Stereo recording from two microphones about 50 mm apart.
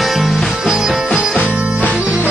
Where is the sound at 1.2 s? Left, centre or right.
Right.